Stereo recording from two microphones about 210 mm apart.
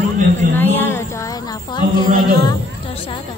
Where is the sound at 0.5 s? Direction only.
10° left (ahead or behind); by 3.2 s 25° left (ahead or behind).